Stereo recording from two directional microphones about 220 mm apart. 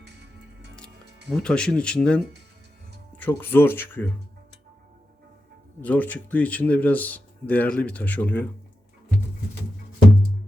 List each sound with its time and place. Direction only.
0.0 s music: 50° right (ahead or behind)
1.3 s speech: 5° left (ahead or behind)
5.8 s speech: 5° left (ahead or behind)